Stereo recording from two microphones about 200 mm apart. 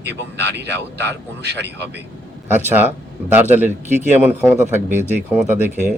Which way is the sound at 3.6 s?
35° right (ahead or behind).